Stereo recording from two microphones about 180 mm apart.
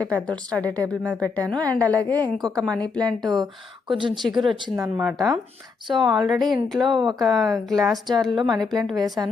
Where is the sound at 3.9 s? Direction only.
25° right (ahead or behind).